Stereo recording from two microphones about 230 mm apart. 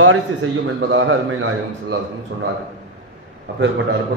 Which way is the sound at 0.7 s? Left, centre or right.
Right.